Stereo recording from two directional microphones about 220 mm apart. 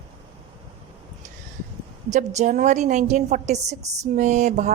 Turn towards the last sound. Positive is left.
turn(degrees=-30)  # may be behind; listen again after turning